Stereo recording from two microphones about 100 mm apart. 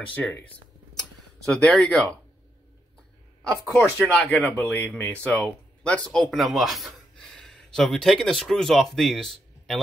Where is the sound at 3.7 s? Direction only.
10° left (ahead or behind).